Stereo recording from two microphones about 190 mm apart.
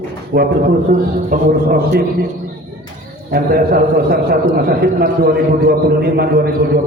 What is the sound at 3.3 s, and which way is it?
A man's voice, 50° right (ahead or behind).